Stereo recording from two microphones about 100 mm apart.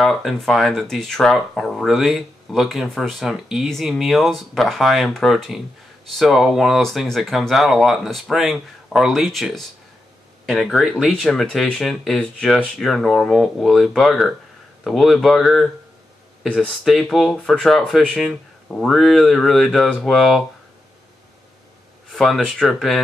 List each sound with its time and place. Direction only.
0.0 s speech: centre (ahead or behind)
22.1 s speech: 5° left (ahead or behind)